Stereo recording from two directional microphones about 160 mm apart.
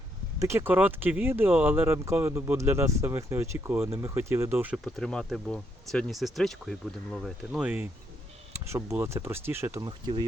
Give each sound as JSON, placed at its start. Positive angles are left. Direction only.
{"t": 0.3, "sound": "speech", "side_deg": -15}
{"t": 4.8, "sound": "speech", "side_deg": 0}